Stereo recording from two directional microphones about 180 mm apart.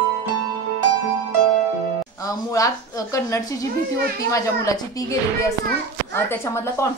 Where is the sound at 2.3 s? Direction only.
20° left (ahead or behind).